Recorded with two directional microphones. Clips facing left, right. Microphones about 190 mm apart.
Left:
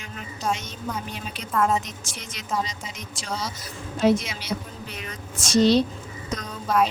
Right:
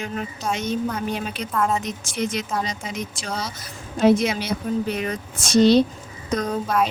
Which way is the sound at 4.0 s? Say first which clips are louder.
Right 4 dB; 55° right (ahead or behind).